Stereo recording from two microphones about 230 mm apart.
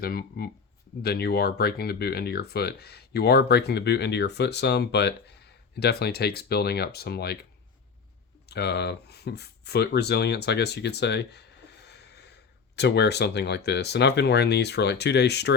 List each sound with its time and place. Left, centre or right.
0.0 s speech: left
8.4 s speech: left
11.9 s a sound: left
12.7 s speech: left